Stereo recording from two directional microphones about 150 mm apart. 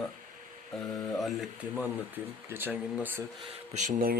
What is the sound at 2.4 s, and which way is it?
Speech, 15° right (ahead or behind).